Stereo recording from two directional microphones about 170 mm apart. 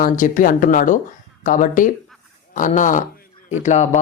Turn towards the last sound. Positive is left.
turn(degrees=45)  # may be behind; listen again after turning